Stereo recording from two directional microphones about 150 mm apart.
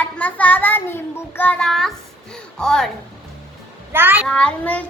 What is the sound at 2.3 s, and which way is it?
Speech, 5° left (ahead or behind).